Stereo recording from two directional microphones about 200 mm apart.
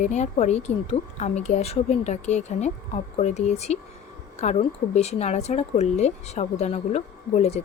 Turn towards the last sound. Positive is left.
turn(degrees=30)  # may be behind; listen again after turning